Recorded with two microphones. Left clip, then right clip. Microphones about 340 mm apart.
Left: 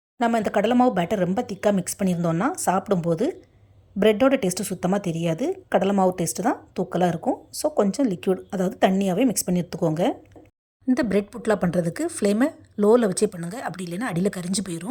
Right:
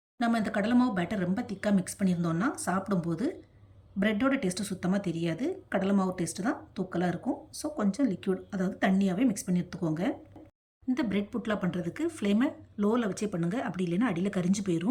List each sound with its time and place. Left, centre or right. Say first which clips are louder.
0.2 s a woman's voice: left 8 dB; centre